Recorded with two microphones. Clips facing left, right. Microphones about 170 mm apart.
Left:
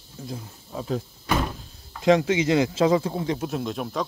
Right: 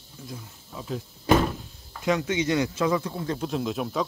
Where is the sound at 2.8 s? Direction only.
25° left (ahead or behind).